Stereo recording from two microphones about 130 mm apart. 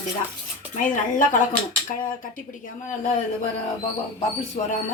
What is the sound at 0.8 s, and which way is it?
Speech, 90° left.